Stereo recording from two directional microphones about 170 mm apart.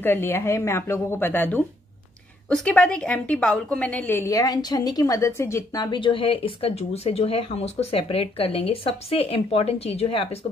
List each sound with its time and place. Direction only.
0.0 s a woman's voice: 10° left (ahead or behind); by 10.4 s 35° left (ahead or behind)